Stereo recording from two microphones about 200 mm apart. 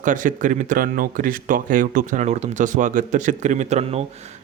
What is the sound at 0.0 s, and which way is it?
Speech, 40° right (ahead or behind).